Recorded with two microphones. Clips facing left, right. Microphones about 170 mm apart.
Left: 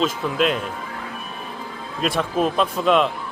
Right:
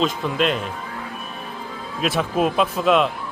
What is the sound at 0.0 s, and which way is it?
Speech, centre (ahead or behind).